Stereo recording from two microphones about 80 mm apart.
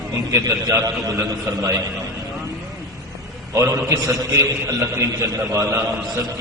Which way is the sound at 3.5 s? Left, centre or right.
Right.